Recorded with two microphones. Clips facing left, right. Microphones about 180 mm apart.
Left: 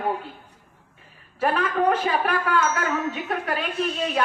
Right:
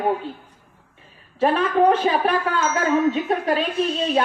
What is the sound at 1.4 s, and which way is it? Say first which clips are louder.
A woman's voice: right 5 dB; 25° right (ahead or behind).